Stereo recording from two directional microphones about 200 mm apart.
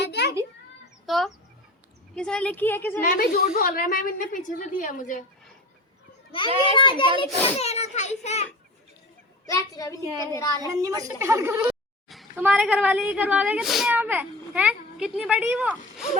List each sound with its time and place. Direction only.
0.0 s children playing: 55° left (ahead or behind)
1.0 s a sound: centre (ahead or behind)
2.1 s a woman's voice: 5° left (ahead or behind)
3.0 s a woman's voice: 45° left (ahead or behind)
6.7 s a child's voice: 25° left (ahead or behind)
9.5 s a woman's voice: 20° left (ahead or behind)
10.6 s speech: 15° right (ahead or behind)
12.0 s speech: centre (ahead or behind)